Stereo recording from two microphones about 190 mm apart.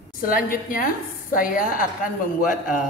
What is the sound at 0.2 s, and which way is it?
A man's voice, 50° left (ahead or behind).